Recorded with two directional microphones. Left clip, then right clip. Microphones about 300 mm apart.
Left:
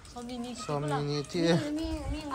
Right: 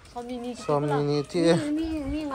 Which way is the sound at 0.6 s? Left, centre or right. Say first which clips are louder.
Right 8 dB; centre.